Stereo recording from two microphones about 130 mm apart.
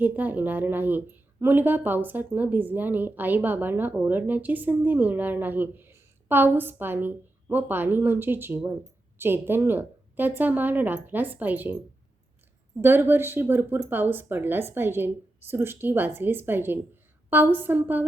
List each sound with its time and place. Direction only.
0.0 s speech: 15° right (ahead or behind)
12.8 s speech: 15° right (ahead or behind)